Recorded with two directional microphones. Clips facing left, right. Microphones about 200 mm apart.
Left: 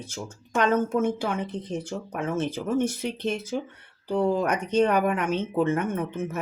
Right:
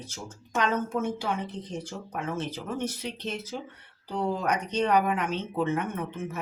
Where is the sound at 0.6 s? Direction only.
50° left (ahead or behind).